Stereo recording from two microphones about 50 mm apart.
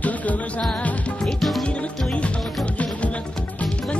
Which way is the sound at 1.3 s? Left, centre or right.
Centre.